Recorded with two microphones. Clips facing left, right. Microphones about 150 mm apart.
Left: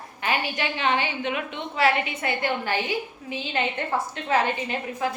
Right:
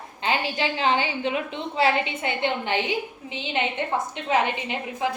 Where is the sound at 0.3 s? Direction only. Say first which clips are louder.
Right 2 dB; 25° right (ahead or behind).